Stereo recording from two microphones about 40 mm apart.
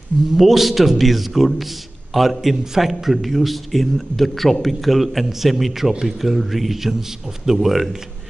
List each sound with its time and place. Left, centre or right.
0.4 s a man's voice: centre